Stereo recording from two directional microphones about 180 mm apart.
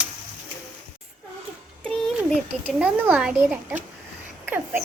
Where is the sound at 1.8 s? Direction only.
5° left (ahead or behind).